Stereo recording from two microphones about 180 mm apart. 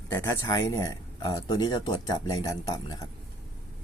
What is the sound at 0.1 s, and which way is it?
Speech, 20° left (ahead or behind).